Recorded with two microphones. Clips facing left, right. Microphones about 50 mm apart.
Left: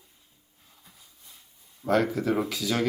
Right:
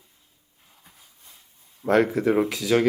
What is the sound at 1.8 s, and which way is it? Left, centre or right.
Speech, right.